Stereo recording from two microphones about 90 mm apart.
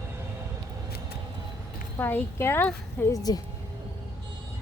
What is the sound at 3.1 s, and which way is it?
Speech, 45° left (ahead or behind).